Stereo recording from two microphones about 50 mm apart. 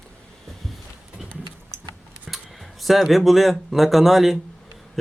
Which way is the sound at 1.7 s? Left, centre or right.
Right.